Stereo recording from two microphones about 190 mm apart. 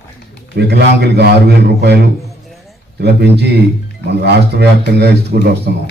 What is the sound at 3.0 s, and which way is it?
Speech, 60° right (ahead or behind).